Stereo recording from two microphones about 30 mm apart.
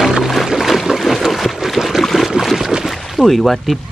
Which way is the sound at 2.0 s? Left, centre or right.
Centre.